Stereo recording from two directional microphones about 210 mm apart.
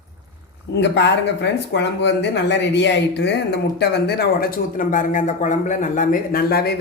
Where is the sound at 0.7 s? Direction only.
55° left (ahead or behind).